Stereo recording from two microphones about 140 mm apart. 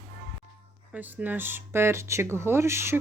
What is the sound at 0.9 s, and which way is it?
Speech, 10° right (ahead or behind).